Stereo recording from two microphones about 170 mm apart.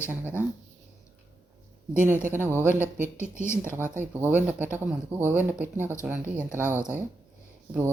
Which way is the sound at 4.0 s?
10° right (ahead or behind).